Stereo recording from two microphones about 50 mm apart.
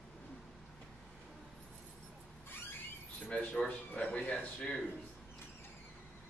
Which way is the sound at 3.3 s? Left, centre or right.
Left.